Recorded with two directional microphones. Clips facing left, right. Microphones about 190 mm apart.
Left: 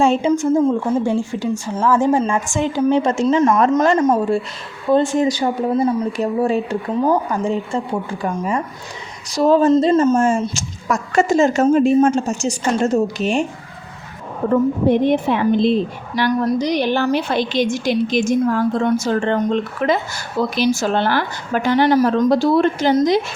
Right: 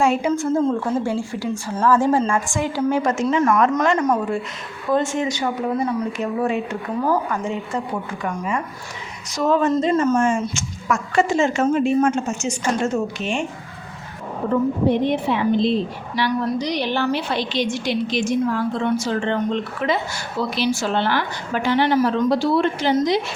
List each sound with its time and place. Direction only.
0.0 s a woman's voice: 25° left (ahead or behind)
0.3 s a woman's voice: 10° left (ahead or behind); by 7.8 s 35° left (ahead or behind)
9.3 s speech: 35° left (ahead or behind)
10.2 s speech: 40° left (ahead or behind)
14.5 s a woman's voice: 50° left (ahead or behind)